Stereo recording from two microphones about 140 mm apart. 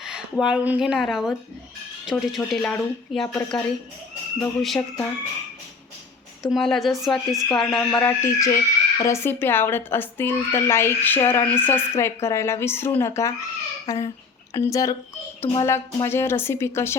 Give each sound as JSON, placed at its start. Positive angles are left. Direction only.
{"t": 0.0, "sound": "speech", "side_deg": -5}
{"t": 6.4, "sound": "speech", "side_deg": 0}
{"t": 7.9, "sound": "a woman's voice", "side_deg": 15}